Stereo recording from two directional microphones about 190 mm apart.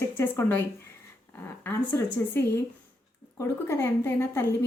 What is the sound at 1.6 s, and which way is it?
A woman's voice, 10° left (ahead or behind).